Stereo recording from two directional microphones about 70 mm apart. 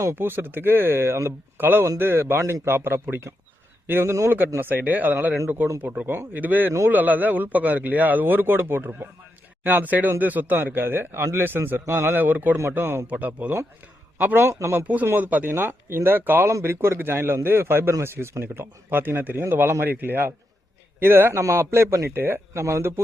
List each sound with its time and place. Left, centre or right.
0.0 s a man's voice: right
14.4 s speech: right
15.0 s speech: right